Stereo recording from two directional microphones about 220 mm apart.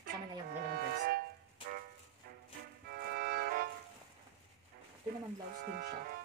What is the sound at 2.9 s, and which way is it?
Music, 45° right (ahead or behind).